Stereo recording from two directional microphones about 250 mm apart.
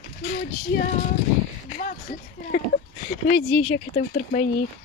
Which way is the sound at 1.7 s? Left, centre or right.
Left.